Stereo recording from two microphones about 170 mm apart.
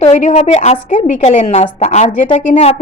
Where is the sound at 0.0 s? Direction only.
40° left (ahead or behind).